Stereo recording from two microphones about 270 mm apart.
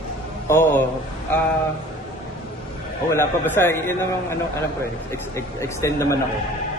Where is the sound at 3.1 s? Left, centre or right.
Centre.